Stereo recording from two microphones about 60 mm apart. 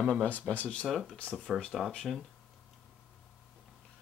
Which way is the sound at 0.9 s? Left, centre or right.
Centre.